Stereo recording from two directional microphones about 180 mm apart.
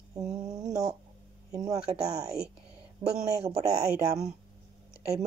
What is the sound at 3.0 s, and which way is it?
Speech, 20° right (ahead or behind).